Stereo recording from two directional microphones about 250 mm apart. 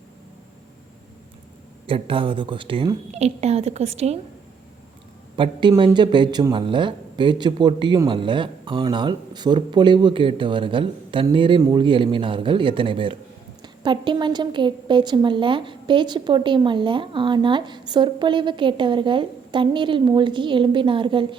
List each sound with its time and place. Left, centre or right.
1.9 s speech: right
5.4 s speech: centre